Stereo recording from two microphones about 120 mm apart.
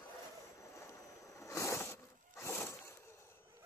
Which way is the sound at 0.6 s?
25° left (ahead or behind).